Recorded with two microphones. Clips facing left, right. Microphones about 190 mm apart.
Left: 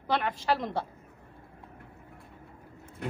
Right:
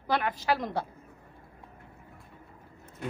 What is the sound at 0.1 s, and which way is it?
Speech, 5° right (ahead or behind).